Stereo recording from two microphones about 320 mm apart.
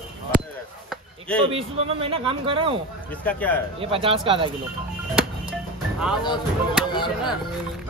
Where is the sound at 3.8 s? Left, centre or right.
Centre.